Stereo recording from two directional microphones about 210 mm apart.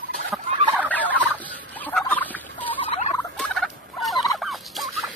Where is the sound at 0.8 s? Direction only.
10° left (ahead or behind).